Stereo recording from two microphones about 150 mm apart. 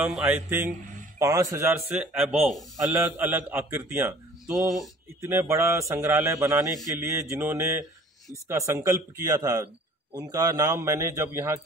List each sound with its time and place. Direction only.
0.0 s a man's voice: 10° right (ahead or behind)
1.9 s speech: 10° right (ahead or behind)
2.8 s a man's voice: 15° right (ahead or behind)